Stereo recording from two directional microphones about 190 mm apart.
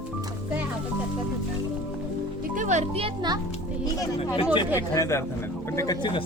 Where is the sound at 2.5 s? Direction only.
40° right (ahead or behind).